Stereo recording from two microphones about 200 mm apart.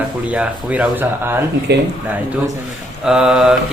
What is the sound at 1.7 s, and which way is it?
Speech, 55° right (ahead or behind).